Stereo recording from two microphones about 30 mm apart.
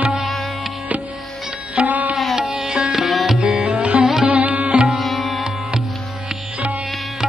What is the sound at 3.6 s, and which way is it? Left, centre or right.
Sitar, right.